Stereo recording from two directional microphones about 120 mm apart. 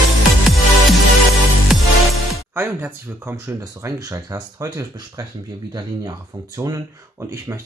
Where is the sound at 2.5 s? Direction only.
15° right (ahead or behind).